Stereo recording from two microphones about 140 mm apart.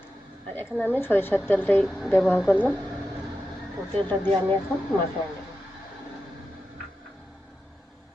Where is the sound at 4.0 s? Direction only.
15° left (ahead or behind).